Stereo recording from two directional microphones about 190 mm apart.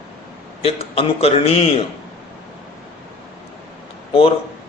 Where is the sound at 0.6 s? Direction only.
30° left (ahead or behind).